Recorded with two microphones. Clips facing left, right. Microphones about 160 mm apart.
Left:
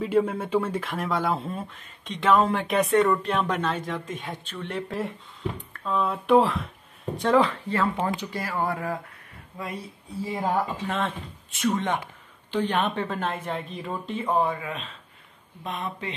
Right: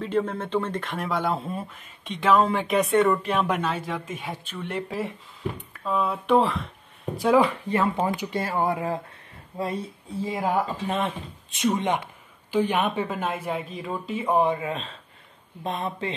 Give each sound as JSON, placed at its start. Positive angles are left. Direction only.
{"t": 0.0, "sound": "speech", "side_deg": 10}
{"t": 8.3, "sound": "speech", "side_deg": -25}
{"t": 10.3, "sound": "speech", "side_deg": -10}
{"t": 14.5, "sound": "speech", "side_deg": -30}